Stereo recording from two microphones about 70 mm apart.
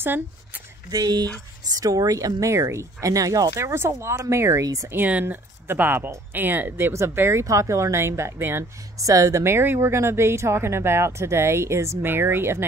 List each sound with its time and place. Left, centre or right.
0.8 s speech: right
1.7 s speech: right
5.2 s speech: right
6.9 s speech: right
8.9 s speech: right
9.4 s speech: right